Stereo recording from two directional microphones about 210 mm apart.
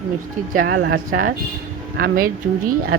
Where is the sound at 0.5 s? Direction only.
55° right (ahead or behind).